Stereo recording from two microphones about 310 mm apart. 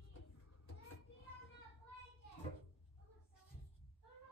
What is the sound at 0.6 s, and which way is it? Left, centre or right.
Children playing, left.